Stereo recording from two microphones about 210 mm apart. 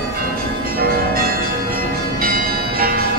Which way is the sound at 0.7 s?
45° right (ahead or behind).